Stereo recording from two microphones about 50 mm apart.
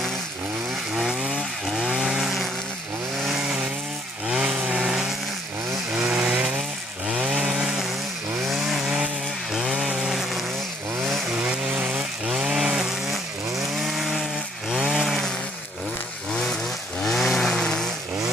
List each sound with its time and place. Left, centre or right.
0.9 s chainsaw: centre
11.7 s chainsaw: right
12.3 s chainsaw: centre
15.0 s chainsaw: centre
17.0 s chainsaw: centre